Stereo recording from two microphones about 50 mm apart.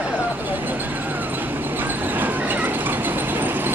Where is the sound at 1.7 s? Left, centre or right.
Right.